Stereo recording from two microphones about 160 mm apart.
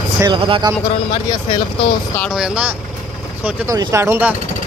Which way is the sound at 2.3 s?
5° right (ahead or behind).